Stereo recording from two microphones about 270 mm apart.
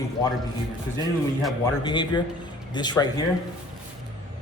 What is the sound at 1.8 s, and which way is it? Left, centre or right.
A man's voice, centre.